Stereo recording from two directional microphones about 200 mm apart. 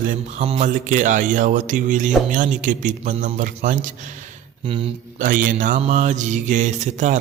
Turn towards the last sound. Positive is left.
turn(degrees=-35)  # may be behind; listen again after turning